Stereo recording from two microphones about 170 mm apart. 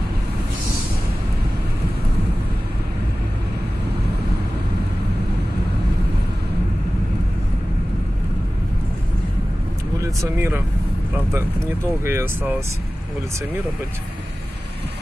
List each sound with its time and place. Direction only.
9.9 s speech: 20° right (ahead or behind)
12.0 s speech: 15° right (ahead or behind)